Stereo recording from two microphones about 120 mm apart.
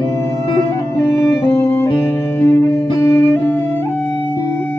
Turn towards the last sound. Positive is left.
turn(degrees=20)  # may be behind; listen again after turning